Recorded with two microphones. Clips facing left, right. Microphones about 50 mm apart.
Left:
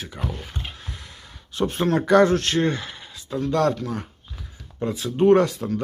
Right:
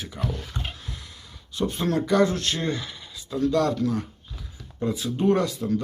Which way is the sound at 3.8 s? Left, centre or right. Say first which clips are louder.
Right 4 dB; left.